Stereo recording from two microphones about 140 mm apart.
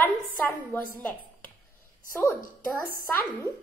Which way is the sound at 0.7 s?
15° left (ahead or behind).